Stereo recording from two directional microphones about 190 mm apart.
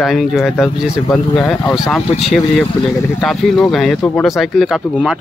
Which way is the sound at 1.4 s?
15° left (ahead or behind).